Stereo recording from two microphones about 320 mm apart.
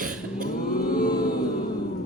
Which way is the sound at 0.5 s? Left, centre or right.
Left.